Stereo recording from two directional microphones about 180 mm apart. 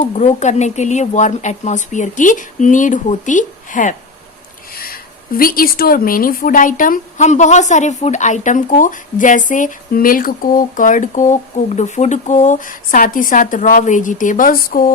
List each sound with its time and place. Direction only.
0.1 s speech: 40° left (ahead or behind)